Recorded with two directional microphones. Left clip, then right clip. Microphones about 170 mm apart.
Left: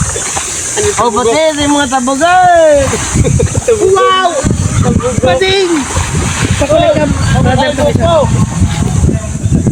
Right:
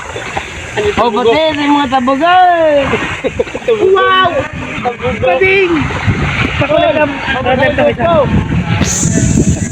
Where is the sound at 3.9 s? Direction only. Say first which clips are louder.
Right 1 dB; 30° left (ahead or behind).